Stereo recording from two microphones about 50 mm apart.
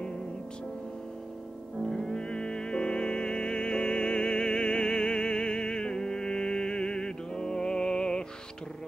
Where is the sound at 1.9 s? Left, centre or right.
Centre.